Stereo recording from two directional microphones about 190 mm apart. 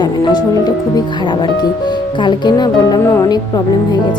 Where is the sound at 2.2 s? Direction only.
25° left (ahead or behind).